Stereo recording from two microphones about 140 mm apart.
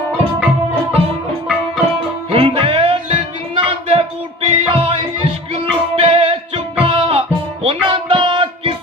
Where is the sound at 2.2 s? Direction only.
40° right (ahead or behind).